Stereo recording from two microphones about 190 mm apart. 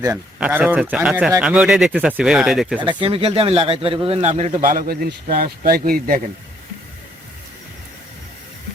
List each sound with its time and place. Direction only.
0.3 s speech: 5° right (ahead or behind)
2.8 s speech: 25° right (ahead or behind); by 6.1 s 50° right (ahead or behind)